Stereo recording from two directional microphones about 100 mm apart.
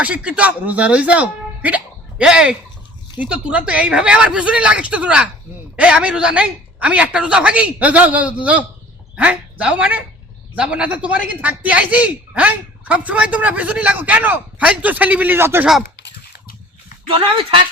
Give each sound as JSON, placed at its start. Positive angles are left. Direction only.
{"t": 0.0, "sound": "speech", "side_deg": -10}
{"t": 17.1, "sound": "speech", "side_deg": -60}